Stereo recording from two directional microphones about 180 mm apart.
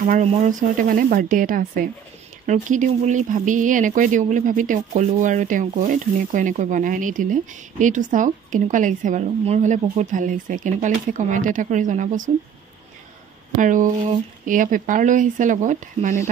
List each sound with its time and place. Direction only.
0.0 s speech: 40° right (ahead or behind)
13.6 s speech: 45° right (ahead or behind)